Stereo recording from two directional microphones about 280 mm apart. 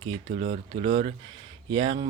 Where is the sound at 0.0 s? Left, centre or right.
Centre.